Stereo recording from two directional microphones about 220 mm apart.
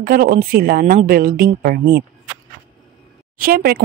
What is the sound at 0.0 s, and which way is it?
Speech, 40° right (ahead or behind).